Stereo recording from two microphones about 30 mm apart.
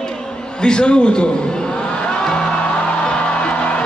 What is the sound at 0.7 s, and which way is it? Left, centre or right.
Speech, left.